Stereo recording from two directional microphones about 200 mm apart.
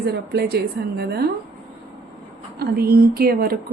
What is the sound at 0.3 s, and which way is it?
Speech, 55° right (ahead or behind).